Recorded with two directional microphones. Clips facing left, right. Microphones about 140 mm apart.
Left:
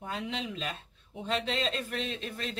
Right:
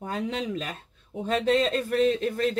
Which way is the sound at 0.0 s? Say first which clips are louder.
Right 6 dB; 45° right (ahead or behind).